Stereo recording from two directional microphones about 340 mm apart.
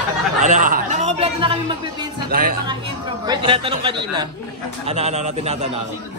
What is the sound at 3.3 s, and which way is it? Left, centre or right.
Speech, centre.